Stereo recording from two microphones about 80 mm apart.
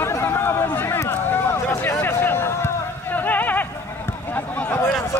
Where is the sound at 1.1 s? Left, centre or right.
Left.